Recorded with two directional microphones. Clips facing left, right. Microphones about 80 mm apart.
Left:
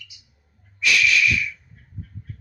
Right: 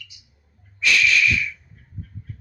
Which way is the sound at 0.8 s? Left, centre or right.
Centre.